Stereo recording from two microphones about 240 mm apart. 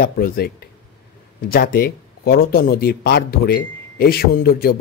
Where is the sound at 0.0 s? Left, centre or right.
Left.